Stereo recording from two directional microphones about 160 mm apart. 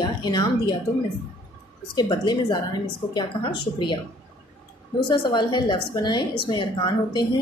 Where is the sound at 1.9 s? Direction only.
25° left (ahead or behind).